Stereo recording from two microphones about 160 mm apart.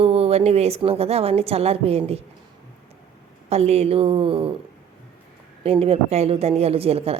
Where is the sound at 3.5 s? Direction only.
40° right (ahead or behind).